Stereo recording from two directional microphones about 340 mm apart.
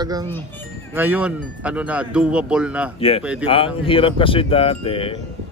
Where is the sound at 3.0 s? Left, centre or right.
Centre.